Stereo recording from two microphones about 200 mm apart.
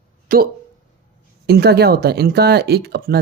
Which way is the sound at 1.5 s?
55° right (ahead or behind).